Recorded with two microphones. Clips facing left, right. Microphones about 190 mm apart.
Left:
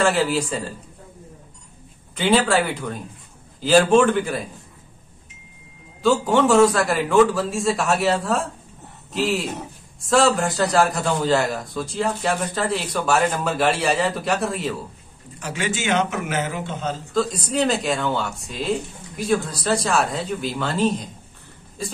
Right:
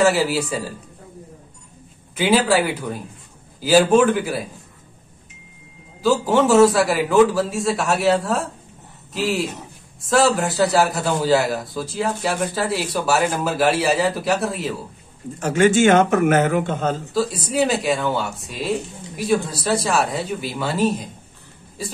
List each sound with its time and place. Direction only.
0.0 s a man's voice: 5° right (ahead or behind)
2.1 s a man's voice: 5° right (ahead or behind)
6.0 s a man's voice: centre (ahead or behind)
15.3 s a man's voice: 50° right (ahead or behind)
17.1 s a man's voice: 5° right (ahead or behind)